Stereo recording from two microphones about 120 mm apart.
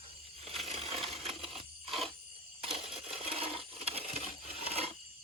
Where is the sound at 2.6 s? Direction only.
50° right (ahead or behind).